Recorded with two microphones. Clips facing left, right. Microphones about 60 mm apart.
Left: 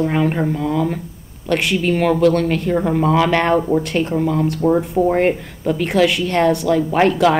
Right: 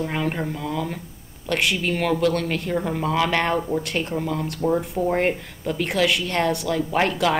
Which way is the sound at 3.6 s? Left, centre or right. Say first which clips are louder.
Left 7 dB; left.